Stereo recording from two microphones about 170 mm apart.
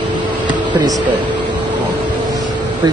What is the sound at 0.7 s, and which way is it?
Speech, 25° right (ahead or behind).